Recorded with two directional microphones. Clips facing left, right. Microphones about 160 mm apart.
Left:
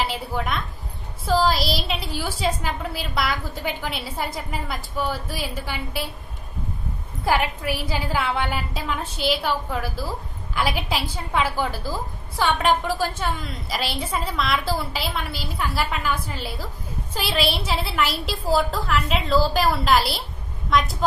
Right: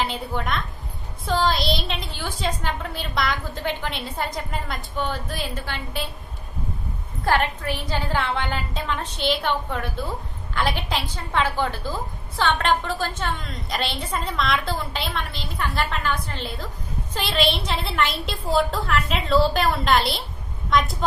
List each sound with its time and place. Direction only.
0.0 s a woman's voice: 5° left (ahead or behind)
7.2 s a woman's voice: 10° left (ahead or behind)